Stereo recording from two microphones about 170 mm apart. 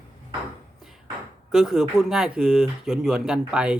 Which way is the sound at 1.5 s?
Centre (ahead or behind).